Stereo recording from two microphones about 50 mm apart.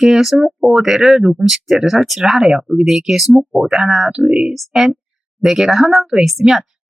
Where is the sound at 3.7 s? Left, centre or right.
Centre.